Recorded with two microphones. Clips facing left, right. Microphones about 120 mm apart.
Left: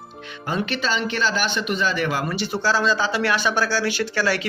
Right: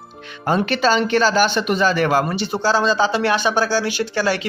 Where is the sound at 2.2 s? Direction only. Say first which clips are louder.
Right 3 dB; 25° right (ahead or behind).